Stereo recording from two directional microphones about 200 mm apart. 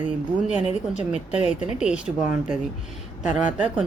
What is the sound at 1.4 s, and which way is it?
Speech, 35° left (ahead or behind).